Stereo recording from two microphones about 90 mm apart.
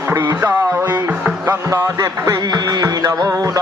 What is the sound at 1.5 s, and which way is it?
Music, 35° right (ahead or behind).